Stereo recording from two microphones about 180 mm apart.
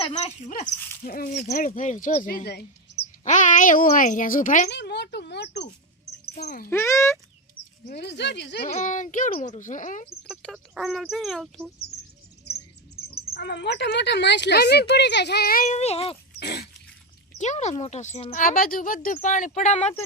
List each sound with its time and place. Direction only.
0.1 s a child's voice: 40° left (ahead or behind)
1.4 s a child's voice: 45° left (ahead or behind)
3.2 s a child's voice: 45° left (ahead or behind)
4.7 s speech: 70° left (ahead or behind)
6.2 s a child's voice: 55° left (ahead or behind)
6.7 s speech: 15° left (ahead or behind)
7.9 s speech: 70° left (ahead or behind)
8.6 s a child's voice: 45° left (ahead or behind)
10.2 s speech: centre (ahead or behind)
13.3 s speech: 70° left (ahead or behind); by 16.1 s 35° left (ahead or behind)
16.4 s dog: 65° left (ahead or behind)
17.3 s speech: 40° left (ahead or behind)